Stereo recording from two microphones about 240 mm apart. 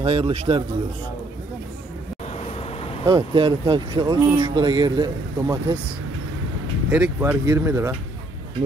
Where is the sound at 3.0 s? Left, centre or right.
Centre.